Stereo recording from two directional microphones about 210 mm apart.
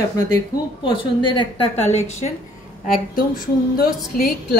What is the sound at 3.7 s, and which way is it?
Speech, 45° left (ahead or behind).